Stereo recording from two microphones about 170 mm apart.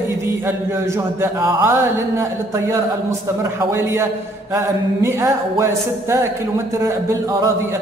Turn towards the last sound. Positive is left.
turn(degrees=-15)  # may be behind; listen again after turning